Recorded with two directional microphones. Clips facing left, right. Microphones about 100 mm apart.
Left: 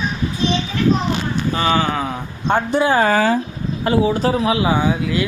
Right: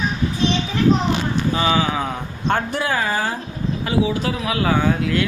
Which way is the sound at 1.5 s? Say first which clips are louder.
Left 2 dB; 5° right (ahead or behind).